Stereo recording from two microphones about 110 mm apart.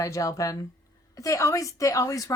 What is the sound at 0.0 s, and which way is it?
A woman's voice, 30° left (ahead or behind).